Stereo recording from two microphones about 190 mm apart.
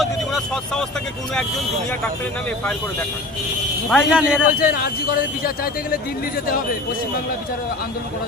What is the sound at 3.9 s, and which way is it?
Speech, 5° right (ahead or behind).